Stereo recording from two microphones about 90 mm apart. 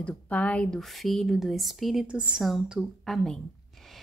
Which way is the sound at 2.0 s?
15° right (ahead or behind).